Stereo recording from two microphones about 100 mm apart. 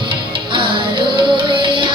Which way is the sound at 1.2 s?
55° right (ahead or behind).